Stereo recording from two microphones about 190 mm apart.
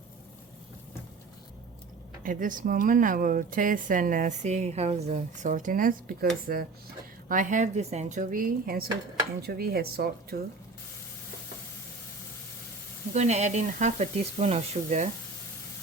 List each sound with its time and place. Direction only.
2.2 s speech: 45° right (ahead or behind)
13.1 s speech: 35° right (ahead or behind)